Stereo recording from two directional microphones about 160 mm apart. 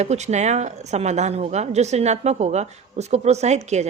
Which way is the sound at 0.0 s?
45° right (ahead or behind).